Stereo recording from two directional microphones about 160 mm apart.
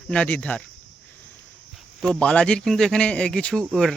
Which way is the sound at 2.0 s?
5° left (ahead or behind).